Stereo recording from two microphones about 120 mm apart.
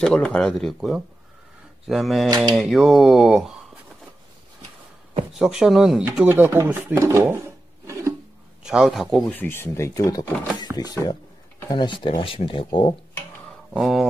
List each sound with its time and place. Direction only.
0.0 s speech: 5° left (ahead or behind)
5.4 s speech: 5° right (ahead or behind)
6.2 s speech: 20° right (ahead or behind)
8.6 s speech: 5° right (ahead or behind)
9.3 s speech: 15° left (ahead or behind); by 12.9 s 45° left (ahead or behind)
13.7 s speech: centre (ahead or behind)